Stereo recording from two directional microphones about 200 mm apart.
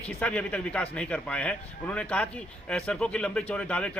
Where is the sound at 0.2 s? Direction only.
5° left (ahead or behind).